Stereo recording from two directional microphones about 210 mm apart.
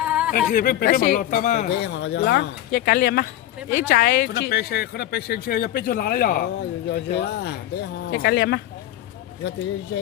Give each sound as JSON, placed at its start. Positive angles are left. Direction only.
{"t": 0.0, "sound": "a sound", "side_deg": -5}
{"t": 0.5, "sound": "speech", "side_deg": 40}
{"t": 1.8, "sound": "speech", "side_deg": 55}